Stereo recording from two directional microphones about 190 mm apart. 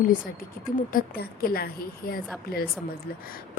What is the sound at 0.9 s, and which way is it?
A woman's voice, 50° left (ahead or behind).